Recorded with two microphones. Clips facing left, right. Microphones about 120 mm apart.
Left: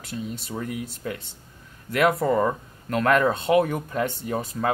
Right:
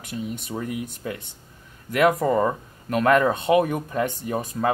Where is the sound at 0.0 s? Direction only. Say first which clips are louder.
Right 2 dB; 15° right (ahead or behind).